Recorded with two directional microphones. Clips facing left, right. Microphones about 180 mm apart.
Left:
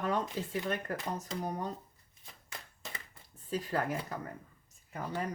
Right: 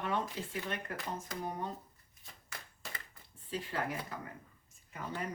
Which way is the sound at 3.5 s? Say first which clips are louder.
Left 4 dB; 40° left (ahead or behind).